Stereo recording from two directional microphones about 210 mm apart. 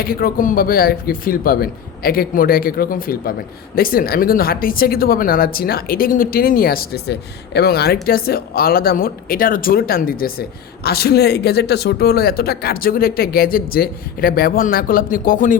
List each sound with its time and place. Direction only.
0.0 s speech: 45° left (ahead or behind)